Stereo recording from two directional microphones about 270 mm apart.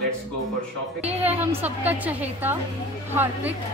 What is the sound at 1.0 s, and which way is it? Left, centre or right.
A woman's voice, centre.